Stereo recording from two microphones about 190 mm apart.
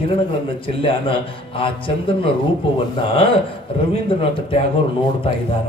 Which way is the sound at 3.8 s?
30° left (ahead or behind).